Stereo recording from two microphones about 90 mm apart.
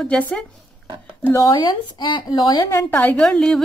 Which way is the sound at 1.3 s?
40° left (ahead or behind).